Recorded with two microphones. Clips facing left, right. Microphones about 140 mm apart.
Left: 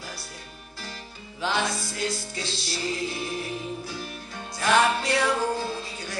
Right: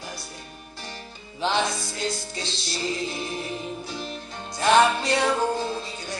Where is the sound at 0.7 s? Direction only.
25° right (ahead or behind).